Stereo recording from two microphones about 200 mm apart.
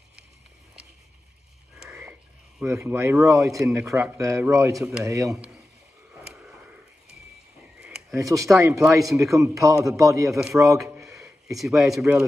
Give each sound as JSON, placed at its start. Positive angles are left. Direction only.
{"t": 2.6, "sound": "a man's voice", "side_deg": -15}
{"t": 8.1, "sound": "a man's voice", "side_deg": -15}
{"t": 11.1, "sound": "speech", "side_deg": 0}